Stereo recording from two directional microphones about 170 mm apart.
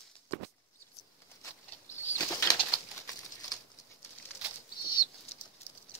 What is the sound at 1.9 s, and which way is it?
Bird flight, 15° left (ahead or behind).